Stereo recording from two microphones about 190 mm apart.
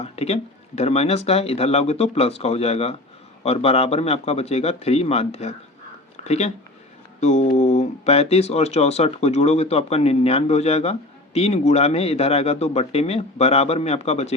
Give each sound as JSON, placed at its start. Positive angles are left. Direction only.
{"t": 0.0, "sound": "speech", "side_deg": 35}